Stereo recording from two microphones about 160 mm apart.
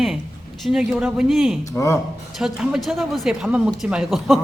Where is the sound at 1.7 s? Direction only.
20° left (ahead or behind).